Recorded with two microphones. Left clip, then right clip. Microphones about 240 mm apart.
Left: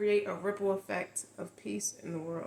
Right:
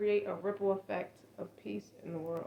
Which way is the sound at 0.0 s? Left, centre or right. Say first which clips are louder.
Left 2 dB; left.